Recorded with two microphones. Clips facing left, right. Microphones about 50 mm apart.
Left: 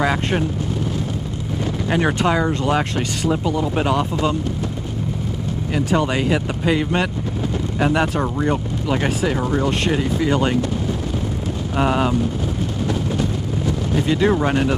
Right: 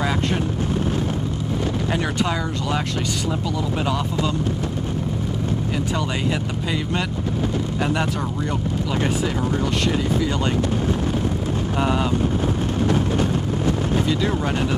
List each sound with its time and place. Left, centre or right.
0.0 s vehicle: left
1.9 s speech: left
5.9 s speech: left
11.8 s speech: left
14.0 s speech: left